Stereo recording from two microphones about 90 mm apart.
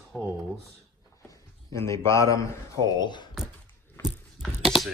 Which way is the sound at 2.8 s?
55° left (ahead or behind).